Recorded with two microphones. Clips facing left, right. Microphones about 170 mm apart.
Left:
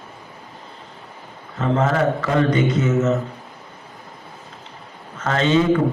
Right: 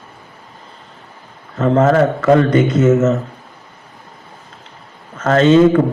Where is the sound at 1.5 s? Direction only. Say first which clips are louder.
Right 7 dB; 50° right (ahead or behind).